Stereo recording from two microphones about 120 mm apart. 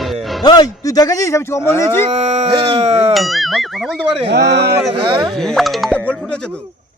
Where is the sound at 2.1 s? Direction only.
60° right (ahead or behind).